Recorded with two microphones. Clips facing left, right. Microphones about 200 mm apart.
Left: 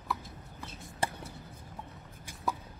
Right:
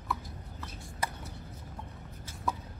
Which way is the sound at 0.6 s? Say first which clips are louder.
Left 2 dB; 30° left (ahead or behind).